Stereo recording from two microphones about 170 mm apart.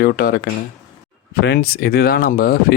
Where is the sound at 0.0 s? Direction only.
60° left (ahead or behind).